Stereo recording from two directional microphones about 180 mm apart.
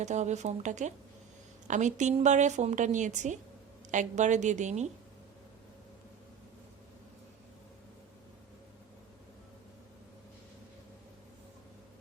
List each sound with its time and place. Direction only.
0.0 s a woman's voice: 40° right (ahead or behind)